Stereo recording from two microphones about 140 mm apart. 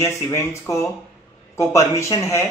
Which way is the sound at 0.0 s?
20° left (ahead or behind).